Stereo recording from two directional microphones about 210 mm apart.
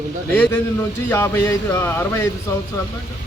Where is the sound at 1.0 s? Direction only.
10° left (ahead or behind).